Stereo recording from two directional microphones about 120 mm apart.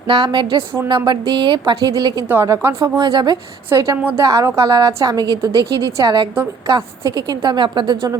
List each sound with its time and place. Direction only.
0.1 s a woman's voice: 40° right (ahead or behind)
2.3 s a woman's voice: 20° right (ahead or behind)
2.8 s a woman's voice: 40° right (ahead or behind)
3.7 s a woman's voice: 25° right (ahead or behind)